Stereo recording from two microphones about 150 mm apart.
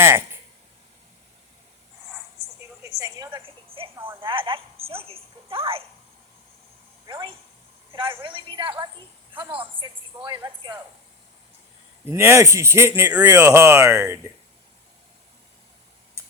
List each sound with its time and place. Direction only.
0.0 s speech: 15° right (ahead or behind)
2.8 s a sound: 25° right (ahead or behind)
3.3 s a sound: 35° right (ahead or behind)
4.2 s a woman's voice: 35° right (ahead or behind)
7.1 s a woman's voice: 35° right (ahead or behind)
12.1 s speech: 15° right (ahead or behind)